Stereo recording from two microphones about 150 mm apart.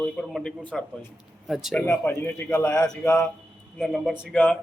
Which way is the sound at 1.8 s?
15° left (ahead or behind).